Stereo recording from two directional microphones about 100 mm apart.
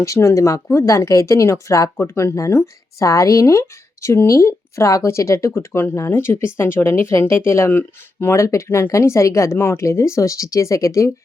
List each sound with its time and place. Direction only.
0.0 s speech: 30° left (ahead or behind)